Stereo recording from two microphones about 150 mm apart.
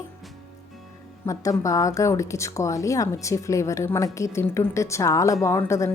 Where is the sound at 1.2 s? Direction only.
20° left (ahead or behind).